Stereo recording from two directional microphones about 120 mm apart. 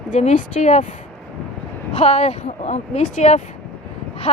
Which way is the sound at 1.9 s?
60° left (ahead or behind).